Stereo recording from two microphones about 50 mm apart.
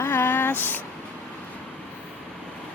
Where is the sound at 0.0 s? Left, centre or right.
Left.